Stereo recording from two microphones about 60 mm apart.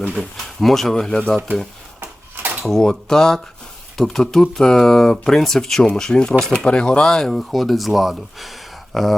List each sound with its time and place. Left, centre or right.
0.1 s speech: centre
2.0 s a sound: right
2.6 s speech: centre
6.7 s speech: centre